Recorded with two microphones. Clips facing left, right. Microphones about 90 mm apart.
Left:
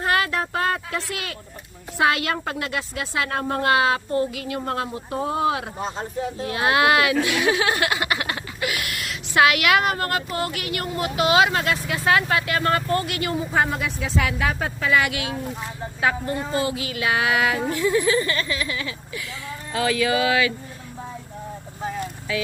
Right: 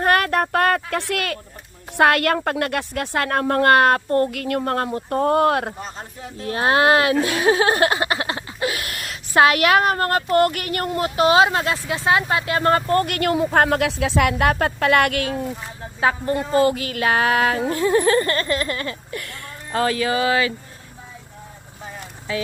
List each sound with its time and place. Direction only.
0.0 s child singing: 55° right (ahead or behind)
2.0 s a woman's voice: 60° right (ahead or behind)
6.5 s speech: 35° right (ahead or behind)
10.2 s speech: 55° right (ahead or behind); by 13.0 s 35° right (ahead or behind)
13.0 s a woman's voice: 55° right (ahead or behind)
16.0 s speech: 35° right (ahead or behind); by 19.3 s 50° right (ahead or behind)
19.7 s speech: 40° right (ahead or behind)